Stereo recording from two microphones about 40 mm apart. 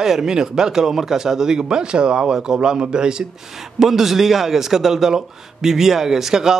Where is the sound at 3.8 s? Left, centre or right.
Centre.